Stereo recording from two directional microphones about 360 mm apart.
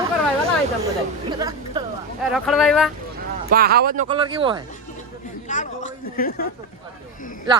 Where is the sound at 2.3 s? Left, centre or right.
Centre.